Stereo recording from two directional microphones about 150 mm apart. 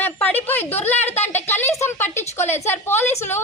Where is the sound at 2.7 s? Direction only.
15° left (ahead or behind).